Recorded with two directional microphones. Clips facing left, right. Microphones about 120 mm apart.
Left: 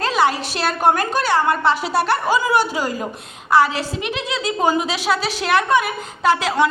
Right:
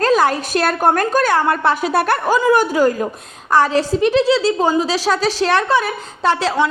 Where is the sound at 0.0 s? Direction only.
45° right (ahead or behind).